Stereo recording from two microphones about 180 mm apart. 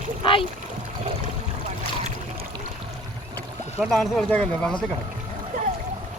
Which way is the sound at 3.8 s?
Centre (ahead or behind).